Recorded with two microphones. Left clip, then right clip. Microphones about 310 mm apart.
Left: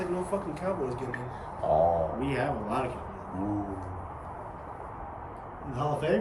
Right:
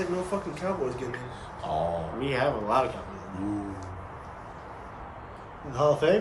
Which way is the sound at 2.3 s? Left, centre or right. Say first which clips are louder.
Right 5 dB; centre.